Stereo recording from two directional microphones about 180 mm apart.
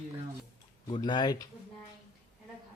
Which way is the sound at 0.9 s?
25° left (ahead or behind).